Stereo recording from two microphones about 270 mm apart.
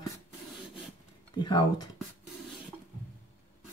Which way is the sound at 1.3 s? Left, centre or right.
Centre.